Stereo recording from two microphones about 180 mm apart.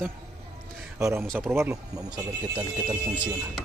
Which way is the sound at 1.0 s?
15° right (ahead or behind).